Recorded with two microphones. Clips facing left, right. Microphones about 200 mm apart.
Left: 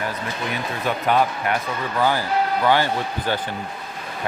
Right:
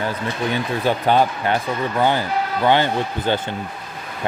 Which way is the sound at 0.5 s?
30° right (ahead or behind).